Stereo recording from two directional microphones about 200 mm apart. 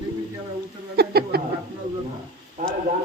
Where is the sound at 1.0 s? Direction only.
50° right (ahead or behind).